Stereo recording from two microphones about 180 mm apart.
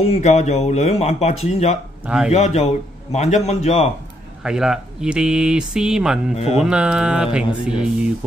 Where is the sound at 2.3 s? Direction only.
35° left (ahead or behind).